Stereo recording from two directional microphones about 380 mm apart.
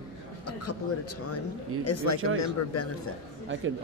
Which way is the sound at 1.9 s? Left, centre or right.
Left.